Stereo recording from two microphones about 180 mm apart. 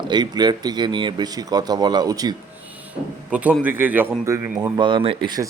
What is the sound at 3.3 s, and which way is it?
A man's voice, 10° right (ahead or behind).